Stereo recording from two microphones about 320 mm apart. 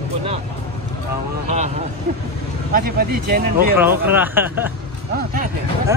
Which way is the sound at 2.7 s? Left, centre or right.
Right.